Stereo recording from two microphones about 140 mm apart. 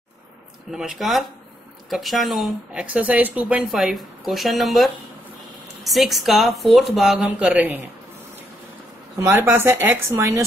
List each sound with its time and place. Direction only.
0.7 s speech: 5° right (ahead or behind)
9.2 s speech: 15° right (ahead or behind)